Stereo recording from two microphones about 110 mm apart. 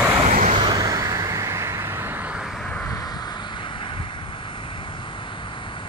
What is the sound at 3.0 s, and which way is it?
Vehicle, 40° left (ahead or behind).